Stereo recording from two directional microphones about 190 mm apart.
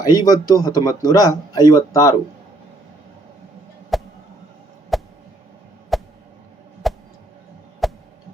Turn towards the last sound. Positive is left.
turn(degrees=0)  # may be behind; listen again after turning